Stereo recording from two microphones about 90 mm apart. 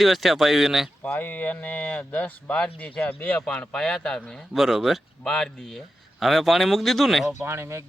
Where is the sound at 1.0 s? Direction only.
20° left (ahead or behind).